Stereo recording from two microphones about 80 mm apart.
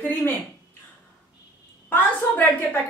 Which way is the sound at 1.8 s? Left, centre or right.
Left.